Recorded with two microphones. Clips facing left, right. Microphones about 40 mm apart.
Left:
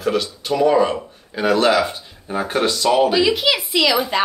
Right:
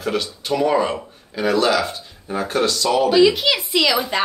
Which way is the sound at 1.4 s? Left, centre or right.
Left.